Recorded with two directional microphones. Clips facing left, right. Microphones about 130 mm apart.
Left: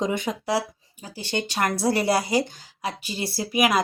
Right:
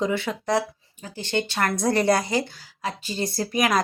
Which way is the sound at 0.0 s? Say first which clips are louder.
Right 1 dB; 15° left (ahead or behind).